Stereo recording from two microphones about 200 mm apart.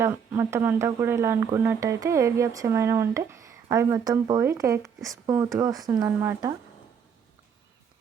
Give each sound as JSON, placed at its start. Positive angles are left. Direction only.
{"t": 0.0, "sound": "speech", "side_deg": -10}